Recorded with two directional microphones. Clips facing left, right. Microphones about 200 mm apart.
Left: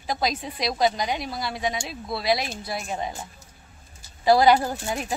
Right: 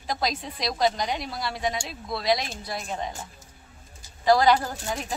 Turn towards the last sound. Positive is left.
turn(degrees=10)  # may be behind; listen again after turning